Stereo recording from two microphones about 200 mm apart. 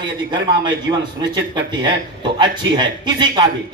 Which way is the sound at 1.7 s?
20° right (ahead or behind).